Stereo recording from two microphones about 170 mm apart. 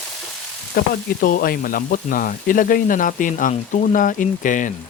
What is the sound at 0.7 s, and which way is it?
Speech, 60° left (ahead or behind).